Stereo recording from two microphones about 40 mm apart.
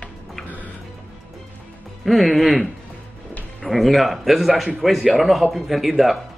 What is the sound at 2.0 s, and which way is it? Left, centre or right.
Speech, centre.